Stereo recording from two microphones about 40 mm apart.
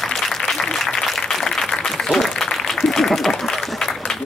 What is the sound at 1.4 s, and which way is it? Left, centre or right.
Applause, centre.